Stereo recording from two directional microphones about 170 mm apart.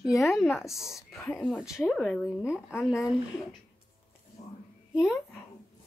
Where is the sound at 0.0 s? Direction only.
Centre (ahead or behind).